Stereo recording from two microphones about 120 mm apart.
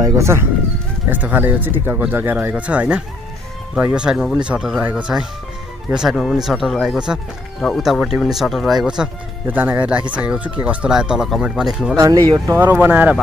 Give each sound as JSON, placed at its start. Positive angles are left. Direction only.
{"t": 0.0, "sound": "speech", "side_deg": -20}
{"t": 12.0, "sound": "speech", "side_deg": -30}
{"t": 12.7, "sound": "speech", "side_deg": -15}